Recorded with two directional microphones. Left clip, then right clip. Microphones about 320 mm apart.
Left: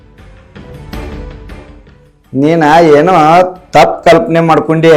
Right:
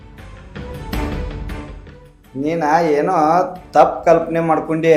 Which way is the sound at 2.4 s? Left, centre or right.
Left.